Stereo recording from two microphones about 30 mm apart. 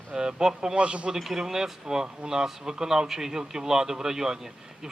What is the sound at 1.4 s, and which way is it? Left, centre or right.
A man's voice, centre.